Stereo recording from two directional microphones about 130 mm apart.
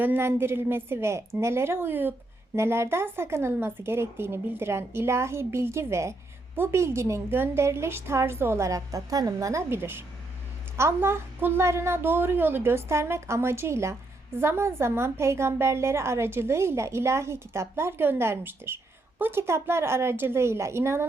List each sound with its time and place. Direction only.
0.0 s a woman's voice: 15° right (ahead or behind)